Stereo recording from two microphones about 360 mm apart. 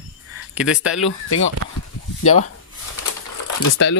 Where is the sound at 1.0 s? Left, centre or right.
Left.